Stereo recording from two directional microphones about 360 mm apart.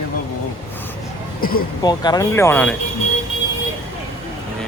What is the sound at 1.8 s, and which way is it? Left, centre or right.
Speech, centre.